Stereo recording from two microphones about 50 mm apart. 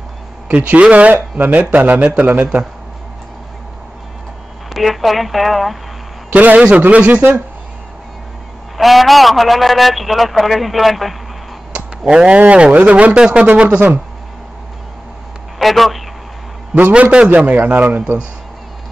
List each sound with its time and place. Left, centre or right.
0.6 s speech: right
4.7 s a man's voice: centre
6.3 s speech: right
8.7 s a man's voice: centre
12.1 s speech: centre
15.6 s a man's voice: centre
16.9 s speech: right
17.8 s speech: right